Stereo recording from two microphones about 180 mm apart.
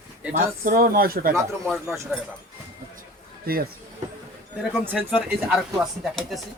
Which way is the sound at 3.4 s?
55° right (ahead or behind).